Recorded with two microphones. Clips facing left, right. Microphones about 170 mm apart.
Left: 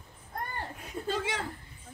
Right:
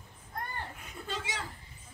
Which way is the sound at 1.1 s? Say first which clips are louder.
Left 6 dB; 55° left (ahead or behind).